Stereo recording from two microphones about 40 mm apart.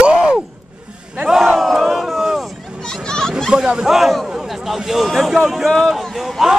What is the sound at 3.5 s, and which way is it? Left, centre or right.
Speech, centre.